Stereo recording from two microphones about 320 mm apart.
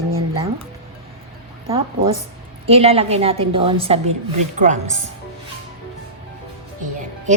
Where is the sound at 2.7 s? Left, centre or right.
Centre.